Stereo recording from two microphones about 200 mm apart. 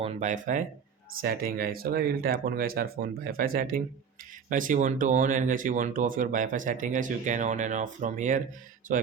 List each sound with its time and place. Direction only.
0.0 s speech: 35° right (ahead or behind)